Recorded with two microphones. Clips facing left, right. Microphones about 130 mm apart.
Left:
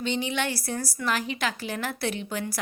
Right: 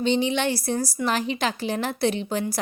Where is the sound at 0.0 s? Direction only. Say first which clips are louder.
Right 6 dB; 25° right (ahead or behind).